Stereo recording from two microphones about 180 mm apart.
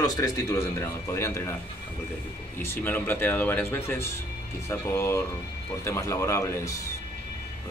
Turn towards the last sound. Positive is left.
turn(degrees=15)  # may be behind; listen again after turning